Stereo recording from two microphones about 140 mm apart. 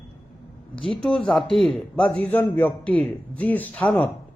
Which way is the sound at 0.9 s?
5° left (ahead or behind).